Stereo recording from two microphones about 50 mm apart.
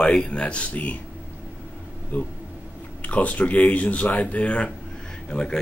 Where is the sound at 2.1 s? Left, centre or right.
Left.